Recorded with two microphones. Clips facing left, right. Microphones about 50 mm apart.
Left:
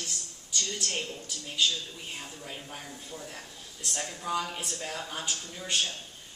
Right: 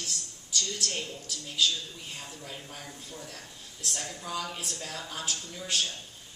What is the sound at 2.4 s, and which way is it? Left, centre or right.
Speech, left.